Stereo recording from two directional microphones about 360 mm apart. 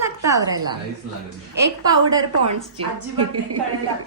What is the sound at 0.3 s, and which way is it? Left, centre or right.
Speech, centre.